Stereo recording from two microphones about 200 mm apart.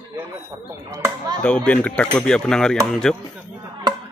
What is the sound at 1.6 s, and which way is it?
Speech, 5° left (ahead or behind).